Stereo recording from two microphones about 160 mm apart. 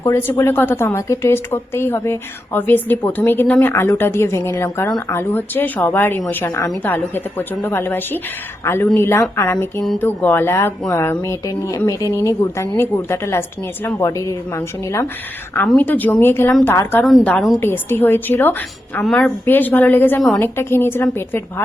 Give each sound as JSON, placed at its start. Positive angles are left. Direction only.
{"t": 0.0, "sound": "a woman's voice", "side_deg": 15}
{"t": 15.6, "sound": "a woman's voice", "side_deg": 5}
{"t": 17.6, "sound": "a woman's voice", "side_deg": 15}